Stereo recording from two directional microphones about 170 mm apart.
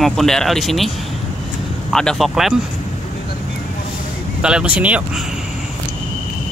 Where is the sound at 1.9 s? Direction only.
Centre (ahead or behind).